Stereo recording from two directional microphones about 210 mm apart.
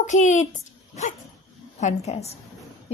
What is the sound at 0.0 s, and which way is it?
Speech, 35° left (ahead or behind).